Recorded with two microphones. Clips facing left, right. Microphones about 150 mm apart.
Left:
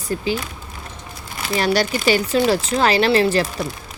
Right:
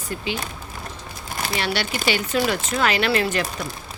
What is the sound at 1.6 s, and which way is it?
A woman's voice, 40° left (ahead or behind).